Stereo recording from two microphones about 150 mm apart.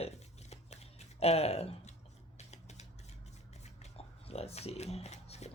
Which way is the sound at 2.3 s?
50° left (ahead or behind).